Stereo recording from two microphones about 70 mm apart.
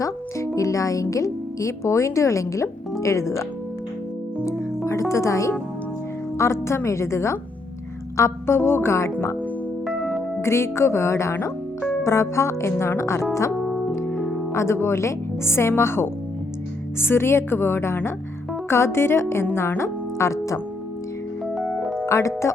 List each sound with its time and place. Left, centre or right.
0.0 s speech: left
4.9 s speech: left
9.8 s music: centre
10.4 s speech: left
14.5 s speech: left
21.5 s music: centre
22.0 s music: left